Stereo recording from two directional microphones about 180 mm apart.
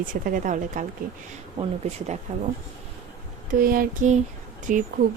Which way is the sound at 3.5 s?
50° right (ahead or behind).